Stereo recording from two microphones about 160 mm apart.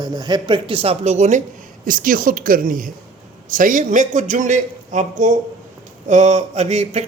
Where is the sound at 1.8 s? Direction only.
60° right (ahead or behind).